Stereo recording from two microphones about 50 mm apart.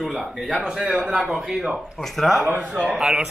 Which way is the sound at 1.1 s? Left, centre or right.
Centre.